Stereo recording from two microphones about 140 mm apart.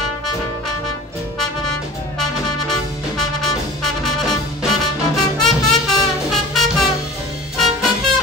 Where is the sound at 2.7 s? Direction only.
5° left (ahead or behind).